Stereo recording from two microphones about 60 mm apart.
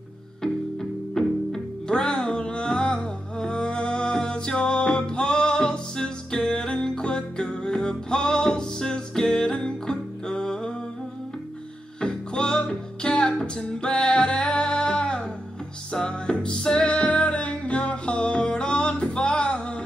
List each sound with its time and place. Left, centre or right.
0.4 s music: centre
12.0 s music: centre